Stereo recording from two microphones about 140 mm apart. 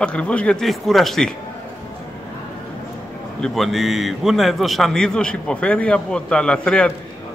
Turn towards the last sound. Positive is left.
turn(degrees=5)  # may be behind; listen again after turning